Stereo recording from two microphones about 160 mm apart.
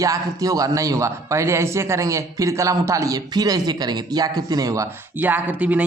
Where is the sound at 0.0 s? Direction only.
20° right (ahead or behind).